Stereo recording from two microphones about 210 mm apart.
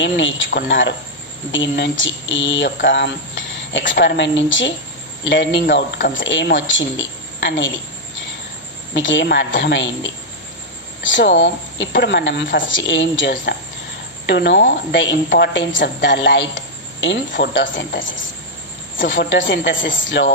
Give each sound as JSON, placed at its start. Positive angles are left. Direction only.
{"t": 0.0, "sound": "a woman's voice", "side_deg": 60}
{"t": 8.9, "sound": "a woman's voice", "side_deg": 60}
{"t": 19.7, "sound": "speech", "side_deg": 40}
{"t": 20.0, "sound": "a woman's voice", "side_deg": 60}